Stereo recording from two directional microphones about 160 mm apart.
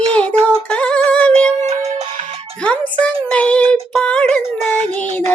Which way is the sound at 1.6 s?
40° right (ahead or behind).